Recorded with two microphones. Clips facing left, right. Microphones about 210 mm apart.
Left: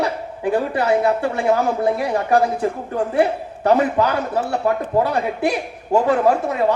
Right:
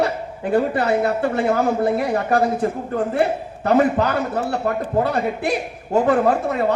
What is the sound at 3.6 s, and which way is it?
A woman's voice, 50° right (ahead or behind).